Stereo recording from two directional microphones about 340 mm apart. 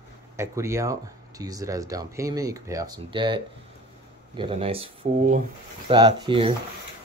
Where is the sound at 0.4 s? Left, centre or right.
Centre.